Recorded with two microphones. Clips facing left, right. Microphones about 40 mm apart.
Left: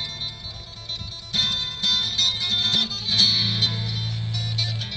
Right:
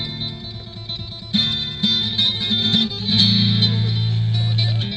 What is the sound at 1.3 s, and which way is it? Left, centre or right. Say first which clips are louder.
Music: right 3 dB; right.